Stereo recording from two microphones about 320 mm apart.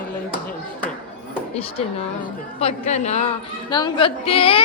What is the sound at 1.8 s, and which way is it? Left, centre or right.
A woman's voice, centre.